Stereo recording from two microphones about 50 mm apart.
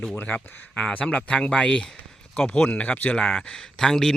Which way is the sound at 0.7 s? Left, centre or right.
Centre.